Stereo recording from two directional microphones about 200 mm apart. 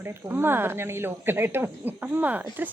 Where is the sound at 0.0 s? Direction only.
10° right (ahead or behind).